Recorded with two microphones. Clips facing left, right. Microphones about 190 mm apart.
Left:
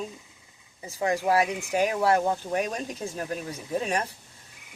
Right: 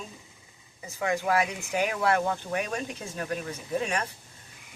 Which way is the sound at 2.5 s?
35° left (ahead or behind).